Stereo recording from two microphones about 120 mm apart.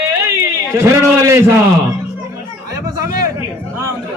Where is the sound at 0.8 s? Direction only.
25° right (ahead or behind).